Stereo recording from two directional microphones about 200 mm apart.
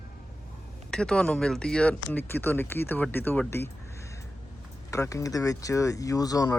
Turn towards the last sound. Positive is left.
turn(degrees=15)  # may be behind; listen again after turning